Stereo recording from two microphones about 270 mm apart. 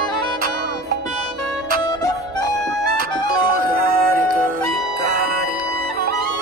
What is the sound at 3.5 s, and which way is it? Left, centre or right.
Music, right.